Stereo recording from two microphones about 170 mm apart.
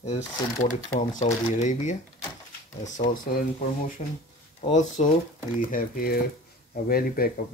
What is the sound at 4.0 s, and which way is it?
Speech, 40° left (ahead or behind).